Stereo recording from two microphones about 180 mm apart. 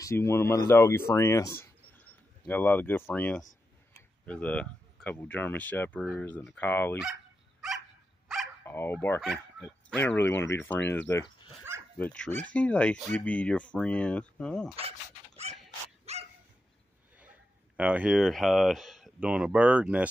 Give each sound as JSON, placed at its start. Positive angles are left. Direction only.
{"t": 0.0, "sound": "speech", "side_deg": 15}
{"t": 8.6, "sound": "speech", "side_deg": 10}
{"t": 11.7, "sound": "dog", "side_deg": -15}
{"t": 12.0, "sound": "speech", "side_deg": 5}
{"t": 15.5, "sound": "dog", "side_deg": -35}
{"t": 17.2, "sound": "speech", "side_deg": -10}